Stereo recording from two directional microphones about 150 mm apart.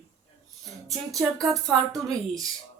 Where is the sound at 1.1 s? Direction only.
Centre (ahead or behind).